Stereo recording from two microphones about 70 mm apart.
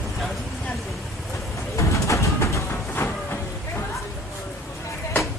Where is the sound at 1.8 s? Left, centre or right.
Left.